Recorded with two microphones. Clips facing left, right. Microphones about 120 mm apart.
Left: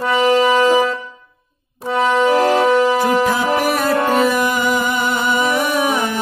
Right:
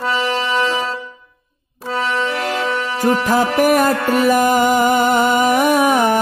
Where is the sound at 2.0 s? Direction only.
15° left (ahead or behind).